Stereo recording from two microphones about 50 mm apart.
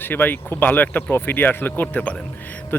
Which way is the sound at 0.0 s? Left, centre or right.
Left.